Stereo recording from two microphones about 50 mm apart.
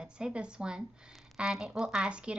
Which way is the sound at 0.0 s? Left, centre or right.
Centre.